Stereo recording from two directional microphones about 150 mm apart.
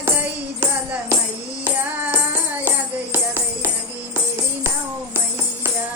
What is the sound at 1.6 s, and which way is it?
Music, 10° right (ahead or behind).